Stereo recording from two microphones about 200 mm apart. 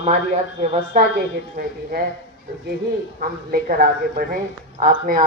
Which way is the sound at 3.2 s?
45° right (ahead or behind).